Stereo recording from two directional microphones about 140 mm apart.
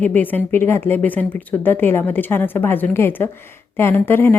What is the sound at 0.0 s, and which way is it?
Speech, 10° left (ahead or behind).